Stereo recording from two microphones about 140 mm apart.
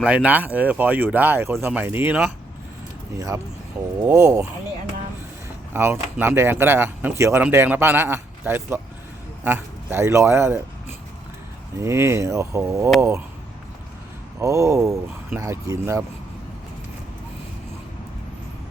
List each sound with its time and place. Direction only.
0.0 s speech: 10° right (ahead or behind)
5.7 s a man's voice: 15° right (ahead or behind)
11.8 s speech: 20° right (ahead or behind)
14.3 s speech: 20° right (ahead or behind)